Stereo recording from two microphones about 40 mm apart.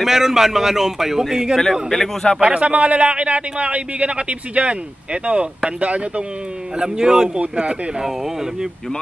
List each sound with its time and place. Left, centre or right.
0.0 s speech: centre
1.6 s a man's voice: centre
2.4 s a man's voice: right
6.8 s speech: centre
7.3 s a man's voice: right